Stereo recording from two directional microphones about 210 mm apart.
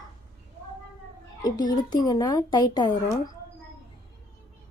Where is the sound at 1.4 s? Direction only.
20° left (ahead or behind).